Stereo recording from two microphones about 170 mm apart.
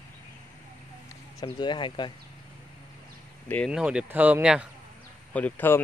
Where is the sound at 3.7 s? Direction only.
5° right (ahead or behind).